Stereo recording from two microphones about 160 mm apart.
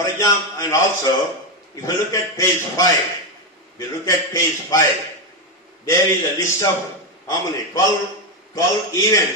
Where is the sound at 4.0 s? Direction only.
20° left (ahead or behind).